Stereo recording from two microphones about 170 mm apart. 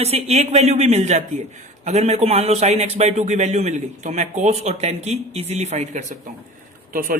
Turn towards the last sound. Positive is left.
turn(degrees=-55)  # may be behind; listen again after turning